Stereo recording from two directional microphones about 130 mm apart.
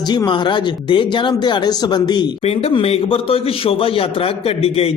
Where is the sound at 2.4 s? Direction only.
50° left (ahead or behind).